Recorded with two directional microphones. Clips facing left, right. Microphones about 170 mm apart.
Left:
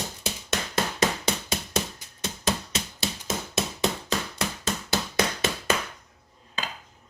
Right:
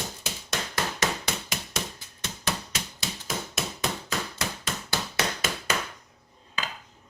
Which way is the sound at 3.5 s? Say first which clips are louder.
Left 7 dB; 25° left (ahead or behind).